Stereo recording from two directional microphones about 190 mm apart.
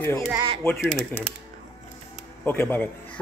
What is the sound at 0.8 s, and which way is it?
Speech, 5° right (ahead or behind).